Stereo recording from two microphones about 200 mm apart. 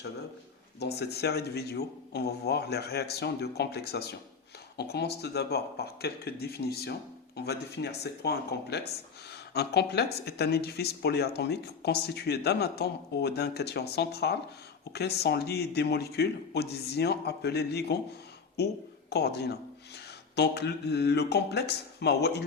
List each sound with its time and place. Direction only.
0.8 s speech: 55° left (ahead or behind)
19.1 s speech: 55° left (ahead or behind)